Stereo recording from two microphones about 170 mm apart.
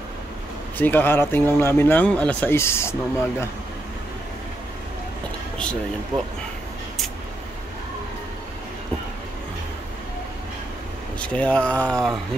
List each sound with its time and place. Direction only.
0.7 s speech: 10° left (ahead or behind)
6.1 s speech: 25° right (ahead or behind)
11.1 s speech: 5° left (ahead or behind)